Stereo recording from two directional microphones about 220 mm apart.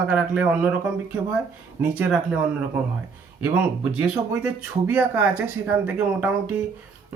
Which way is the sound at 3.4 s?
10° right (ahead or behind).